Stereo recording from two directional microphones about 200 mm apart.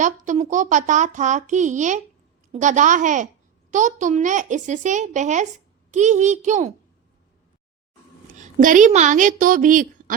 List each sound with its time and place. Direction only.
0.0 s a child's voice: 40° right (ahead or behind)
8.3 s a woman's voice: 40° right (ahead or behind)